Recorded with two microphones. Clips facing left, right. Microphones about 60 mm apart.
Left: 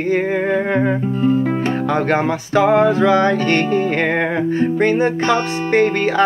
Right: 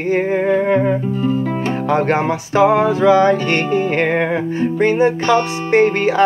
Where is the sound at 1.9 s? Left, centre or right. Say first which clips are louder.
Right 3 dB; centre.